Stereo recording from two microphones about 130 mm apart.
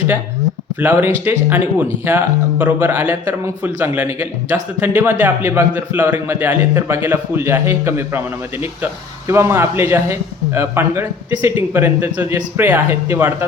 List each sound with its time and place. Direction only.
0.8 s a man's voice: 15° right (ahead or behind)